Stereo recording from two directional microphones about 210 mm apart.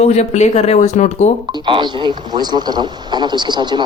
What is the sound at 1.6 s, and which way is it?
A man's voice, 20° right (ahead or behind).